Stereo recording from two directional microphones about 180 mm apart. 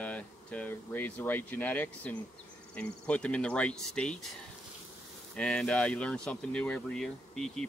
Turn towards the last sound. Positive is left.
turn(degrees=0)  # may be behind; listen again after turning